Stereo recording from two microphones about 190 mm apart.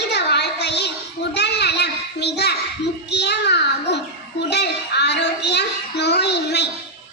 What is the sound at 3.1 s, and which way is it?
Child singing, 60° left (ahead or behind).